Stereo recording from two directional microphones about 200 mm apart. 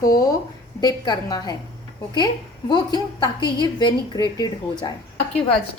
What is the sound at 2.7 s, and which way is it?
A woman's voice, 20° left (ahead or behind).